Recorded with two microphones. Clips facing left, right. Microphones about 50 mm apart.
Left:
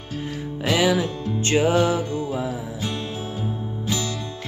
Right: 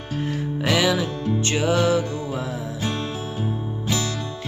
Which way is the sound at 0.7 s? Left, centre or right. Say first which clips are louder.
Left 2 dB; centre.